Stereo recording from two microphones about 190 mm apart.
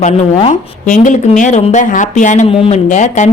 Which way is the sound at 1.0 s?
40° left (ahead or behind).